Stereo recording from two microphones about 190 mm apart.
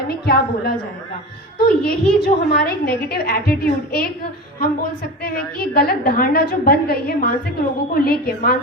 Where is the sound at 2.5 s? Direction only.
55° left (ahead or behind).